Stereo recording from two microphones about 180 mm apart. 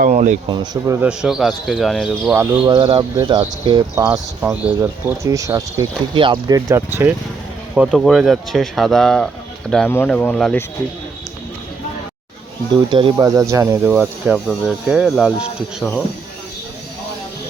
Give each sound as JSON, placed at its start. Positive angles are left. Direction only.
{"t": 0.0, "sound": "speech", "side_deg": -40}
{"t": 0.4, "sound": "speech", "side_deg": -25}
{"t": 1.0, "sound": "speech", "side_deg": -5}
{"t": 2.3, "sound": "speech", "side_deg": -15}
{"t": 2.7, "sound": "speech", "side_deg": -30}
{"t": 4.4, "sound": "speech", "side_deg": -10}
{"t": 7.8, "sound": "speech", "side_deg": 0}
{"t": 12.7, "sound": "speech", "side_deg": -25}